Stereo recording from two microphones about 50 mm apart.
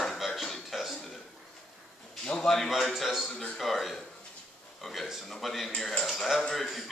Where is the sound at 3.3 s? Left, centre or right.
Centre.